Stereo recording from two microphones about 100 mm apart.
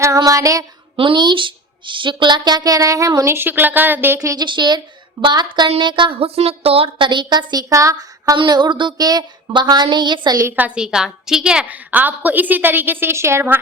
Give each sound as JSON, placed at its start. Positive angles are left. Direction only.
{"t": 0.2, "sound": "female singing", "side_deg": -35}
{"t": 0.9, "sound": "a woman's voice", "side_deg": -55}
{"t": 3.3, "sound": "speech", "side_deg": -20}
{"t": 4.2, "sound": "female singing", "side_deg": -35}
{"t": 4.4, "sound": "a woman's voice", "side_deg": -50}
{"t": 6.1, "sound": "a woman's voice", "side_deg": -80}
{"t": 7.7, "sound": "a woman's voice", "side_deg": -35}
{"t": 8.4, "sound": "a woman's voice", "side_deg": -45}
{"t": 10.5, "sound": "a woman's voice", "side_deg": -10}